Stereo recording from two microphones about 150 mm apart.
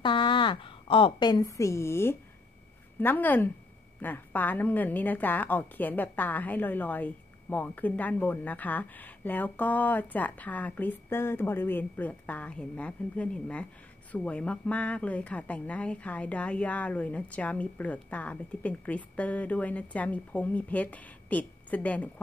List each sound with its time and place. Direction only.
0.0 s a woman's voice: 30° left (ahead or behind); by 22.1 s 10° left (ahead or behind)